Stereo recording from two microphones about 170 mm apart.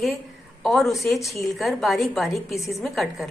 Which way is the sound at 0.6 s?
Centre (ahead or behind).